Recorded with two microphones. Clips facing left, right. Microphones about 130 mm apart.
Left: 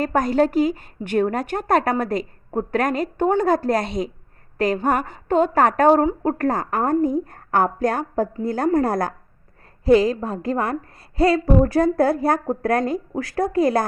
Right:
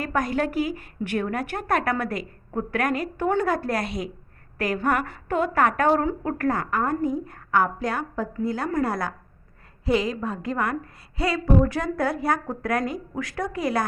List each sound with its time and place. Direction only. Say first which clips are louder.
0.0 s a woman's voice: left 6 dB; 30° left (ahead or behind)
6.7 s a woman's voice: left 5 dB; 45° left (ahead or behind)